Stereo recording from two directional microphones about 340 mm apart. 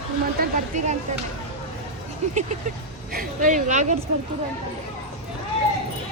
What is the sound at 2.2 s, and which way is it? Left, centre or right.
Speech, centre.